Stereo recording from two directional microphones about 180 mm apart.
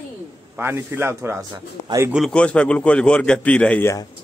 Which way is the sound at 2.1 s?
5° left (ahead or behind).